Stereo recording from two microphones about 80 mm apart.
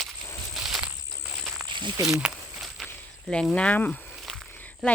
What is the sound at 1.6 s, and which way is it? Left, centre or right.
Snake, right.